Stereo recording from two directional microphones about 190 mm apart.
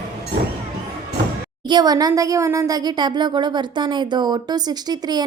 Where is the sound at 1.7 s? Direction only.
20° right (ahead or behind).